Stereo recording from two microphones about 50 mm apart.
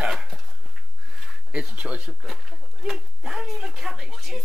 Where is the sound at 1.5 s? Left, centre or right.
Right.